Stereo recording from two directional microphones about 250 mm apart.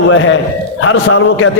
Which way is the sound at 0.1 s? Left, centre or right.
Left.